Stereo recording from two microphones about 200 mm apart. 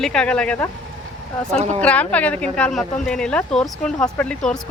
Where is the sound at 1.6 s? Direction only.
30° right (ahead or behind).